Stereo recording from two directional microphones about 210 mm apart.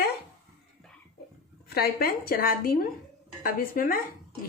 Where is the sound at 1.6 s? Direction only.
45° left (ahead or behind).